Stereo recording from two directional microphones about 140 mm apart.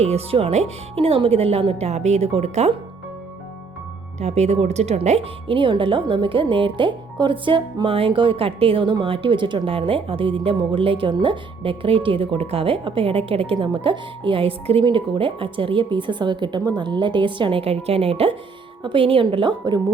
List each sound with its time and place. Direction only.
0.0 s speech: 45° right (ahead or behind)
4.2 s speech: 50° right (ahead or behind); by 19.8 s 30° right (ahead or behind)